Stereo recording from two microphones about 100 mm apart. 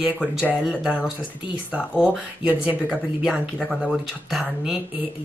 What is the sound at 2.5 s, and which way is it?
Speech, 15° right (ahead or behind).